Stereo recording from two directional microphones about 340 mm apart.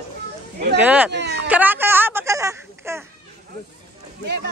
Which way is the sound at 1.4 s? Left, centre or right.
Centre.